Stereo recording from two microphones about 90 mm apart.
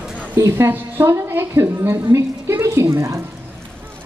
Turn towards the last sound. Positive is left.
turn(degrees=-30)  # may be behind; listen again after turning